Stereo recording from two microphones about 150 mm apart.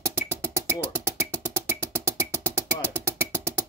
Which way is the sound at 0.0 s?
15° right (ahead or behind).